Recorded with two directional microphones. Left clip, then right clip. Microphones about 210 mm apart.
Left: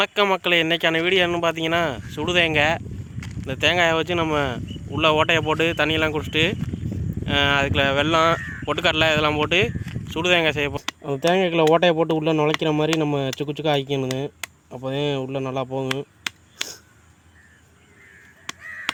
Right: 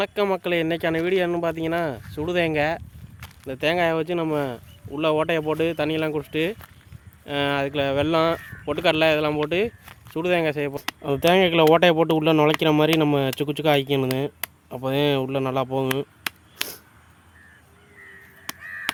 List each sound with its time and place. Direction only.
0.0 s speech: centre (ahead or behind)
11.0 s speech: 15° right (ahead or behind)
18.6 s a sound: 20° left (ahead or behind)